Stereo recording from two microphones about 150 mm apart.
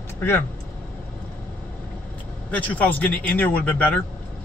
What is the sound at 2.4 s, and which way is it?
Speech, 10° left (ahead or behind).